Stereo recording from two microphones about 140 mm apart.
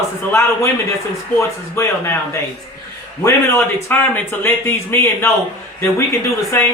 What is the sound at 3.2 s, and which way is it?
Speech, 20° left (ahead or behind).